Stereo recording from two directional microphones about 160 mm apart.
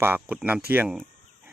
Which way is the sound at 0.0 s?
15° right (ahead or behind).